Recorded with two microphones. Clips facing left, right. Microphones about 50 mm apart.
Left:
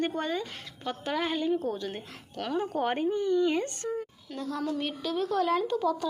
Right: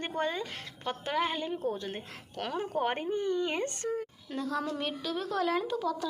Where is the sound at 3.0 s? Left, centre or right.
Right.